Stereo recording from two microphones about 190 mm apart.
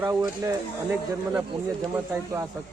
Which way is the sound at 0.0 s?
15° right (ahead or behind).